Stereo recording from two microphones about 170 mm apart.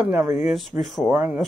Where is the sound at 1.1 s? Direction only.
10° right (ahead or behind).